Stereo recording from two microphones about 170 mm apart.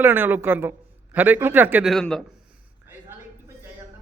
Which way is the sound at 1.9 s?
5° left (ahead or behind).